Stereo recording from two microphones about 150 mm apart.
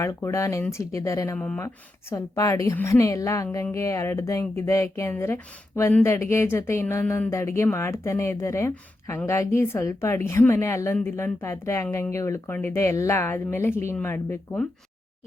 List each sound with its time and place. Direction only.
0.0 s a woman's voice: 20° left (ahead or behind)